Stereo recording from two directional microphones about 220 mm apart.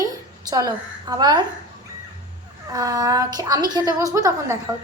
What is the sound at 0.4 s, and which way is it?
A woman's voice, 15° right (ahead or behind).